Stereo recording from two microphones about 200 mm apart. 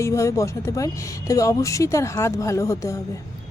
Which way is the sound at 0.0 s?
15° left (ahead or behind).